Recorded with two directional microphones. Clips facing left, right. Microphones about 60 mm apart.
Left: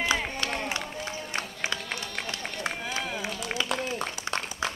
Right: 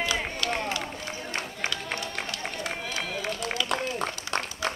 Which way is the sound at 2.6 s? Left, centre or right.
Left.